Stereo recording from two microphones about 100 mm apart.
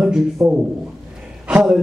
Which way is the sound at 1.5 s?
5° right (ahead or behind).